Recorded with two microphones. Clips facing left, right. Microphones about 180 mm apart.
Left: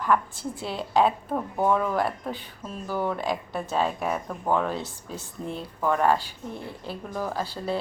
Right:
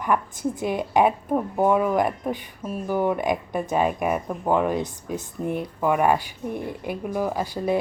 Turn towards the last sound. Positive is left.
turn(degrees=-15)  # may be behind; listen again after turning